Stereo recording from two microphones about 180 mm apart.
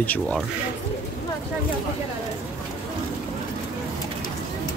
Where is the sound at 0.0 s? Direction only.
10° left (ahead or behind).